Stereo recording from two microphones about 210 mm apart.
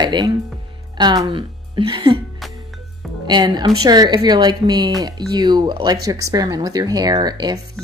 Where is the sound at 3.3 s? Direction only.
20° right (ahead or behind).